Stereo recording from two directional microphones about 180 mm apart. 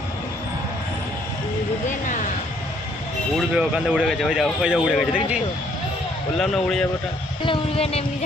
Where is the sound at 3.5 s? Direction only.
5° right (ahead or behind).